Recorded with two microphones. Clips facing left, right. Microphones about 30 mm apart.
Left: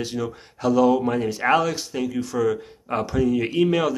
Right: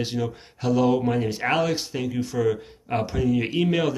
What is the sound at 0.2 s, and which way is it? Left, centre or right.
Speech, centre.